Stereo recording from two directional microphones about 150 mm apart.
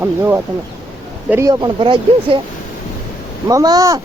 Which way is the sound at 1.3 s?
20° right (ahead or behind).